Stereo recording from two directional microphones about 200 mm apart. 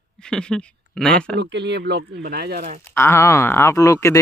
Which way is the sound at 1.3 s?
60° right (ahead or behind).